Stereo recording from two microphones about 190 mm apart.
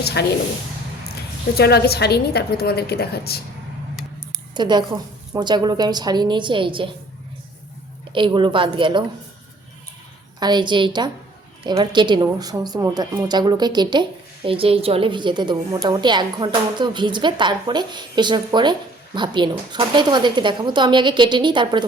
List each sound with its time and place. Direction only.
0.0 s a woman's voice: 60° left (ahead or behind)
1.5 s a woman's voice: 55° left (ahead or behind)
4.5 s a woman's voice: 25° right (ahead or behind)
8.1 s a woman's voice: 25° right (ahead or behind)
10.4 s a woman's voice: 25° right (ahead or behind)